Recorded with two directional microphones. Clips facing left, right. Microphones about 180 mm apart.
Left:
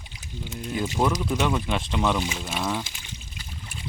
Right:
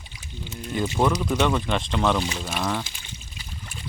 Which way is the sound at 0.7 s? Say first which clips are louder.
Right 2 dB; 5° left (ahead or behind).